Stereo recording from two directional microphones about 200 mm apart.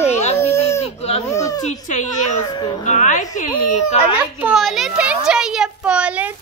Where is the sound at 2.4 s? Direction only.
20° left (ahead or behind).